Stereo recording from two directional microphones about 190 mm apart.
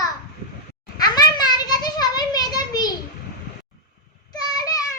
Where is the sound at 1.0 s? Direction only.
20° left (ahead or behind).